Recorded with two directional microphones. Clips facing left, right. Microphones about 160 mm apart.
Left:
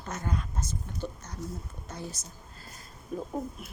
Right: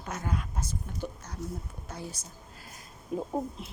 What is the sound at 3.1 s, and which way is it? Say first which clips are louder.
Speech: right 2 dB; 20° right (ahead or behind).